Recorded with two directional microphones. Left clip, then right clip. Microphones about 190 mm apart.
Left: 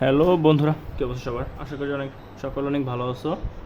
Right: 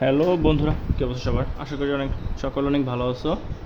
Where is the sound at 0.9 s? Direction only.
10° right (ahead or behind).